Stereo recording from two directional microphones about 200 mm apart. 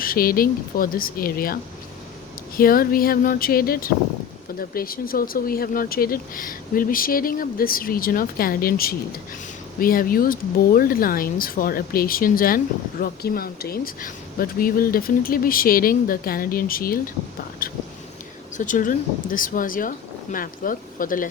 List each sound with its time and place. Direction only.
0.0 s speech: 45° left (ahead or behind)
2.6 s speech: 45° left (ahead or behind)